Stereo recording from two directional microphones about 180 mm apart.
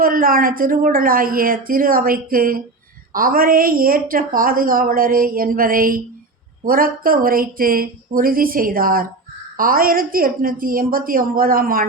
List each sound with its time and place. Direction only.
0.0 s a woman's voice: 50° right (ahead or behind)